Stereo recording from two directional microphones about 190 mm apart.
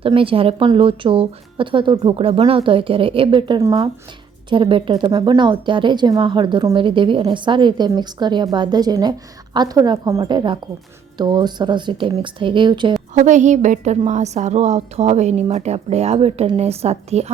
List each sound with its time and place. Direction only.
0.0 s a woman's voice: 30° right (ahead or behind)
13.1 s a woman's voice: 40° right (ahead or behind)